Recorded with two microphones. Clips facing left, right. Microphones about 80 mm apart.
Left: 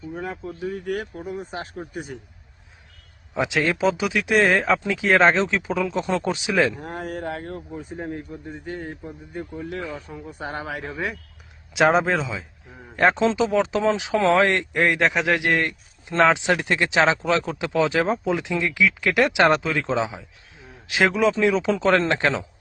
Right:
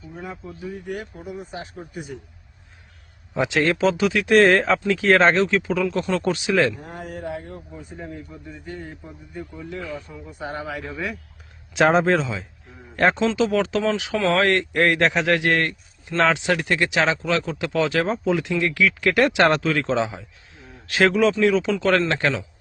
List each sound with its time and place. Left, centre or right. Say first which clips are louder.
0.2 s speech: left 3 dB; left
0.7 s speech: left 3 dB; left
1.3 s a man's voice: even; left
3.3 s speech: right 2 dB; centre
6.7 s a man's voice: left 3 dB; left
7.9 s a man's voice: left 3 dB; left
11.7 s speech: right 1 dB; centre
13.0 s speech: even; centre
16.0 s a man's voice: left 1 dB; centre